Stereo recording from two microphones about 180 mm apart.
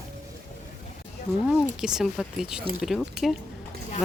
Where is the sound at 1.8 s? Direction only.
5° right (ahead or behind).